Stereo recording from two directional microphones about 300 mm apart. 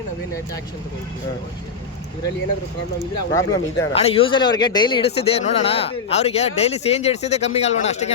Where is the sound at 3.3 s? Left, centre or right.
Centre.